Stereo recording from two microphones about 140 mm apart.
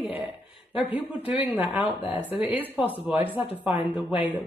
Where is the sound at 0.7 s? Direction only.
10° right (ahead or behind).